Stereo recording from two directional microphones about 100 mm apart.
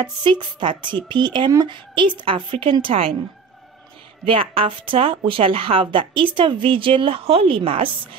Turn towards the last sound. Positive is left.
turn(degrees=-65)  # may be behind; listen again after turning